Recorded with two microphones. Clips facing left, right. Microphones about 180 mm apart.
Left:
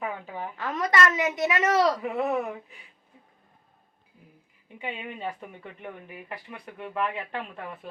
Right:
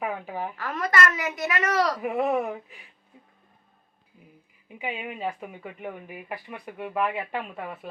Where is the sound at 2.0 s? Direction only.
15° right (ahead or behind).